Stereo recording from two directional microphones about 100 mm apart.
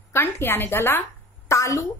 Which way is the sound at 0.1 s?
25° left (ahead or behind).